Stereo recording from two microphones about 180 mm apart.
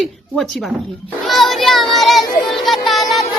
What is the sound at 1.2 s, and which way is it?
Child singing, centre (ahead or behind).